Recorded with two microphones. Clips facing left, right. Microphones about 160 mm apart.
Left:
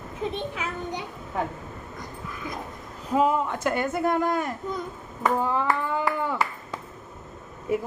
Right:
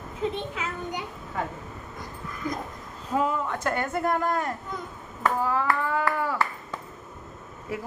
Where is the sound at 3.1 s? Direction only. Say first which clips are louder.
Left 4 dB; 15° left (ahead or behind).